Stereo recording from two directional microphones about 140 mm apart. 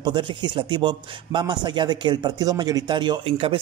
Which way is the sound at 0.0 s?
35° right (ahead or behind).